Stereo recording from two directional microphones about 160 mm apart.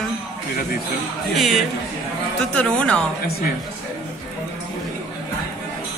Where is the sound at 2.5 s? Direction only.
5° left (ahead or behind).